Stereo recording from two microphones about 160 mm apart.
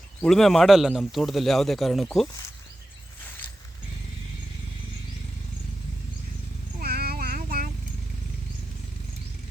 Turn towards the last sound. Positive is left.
turn(degrees=-65)  # may be behind; listen again after turning